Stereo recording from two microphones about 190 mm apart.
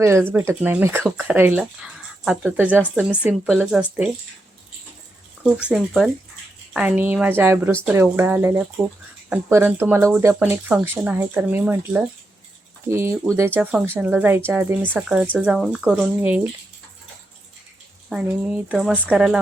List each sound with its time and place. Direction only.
0.0 s speech: 15° right (ahead or behind)
5.4 s speech: 5° right (ahead or behind)
18.1 s speech: 5° right (ahead or behind)